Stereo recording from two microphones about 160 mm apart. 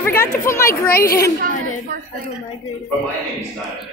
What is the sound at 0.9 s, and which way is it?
Speech, 70° left (ahead or behind).